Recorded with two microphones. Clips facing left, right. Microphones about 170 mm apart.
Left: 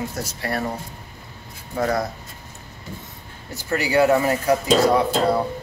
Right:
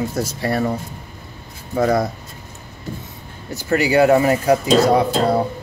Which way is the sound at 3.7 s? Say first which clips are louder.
Right 4 dB; 20° right (ahead or behind).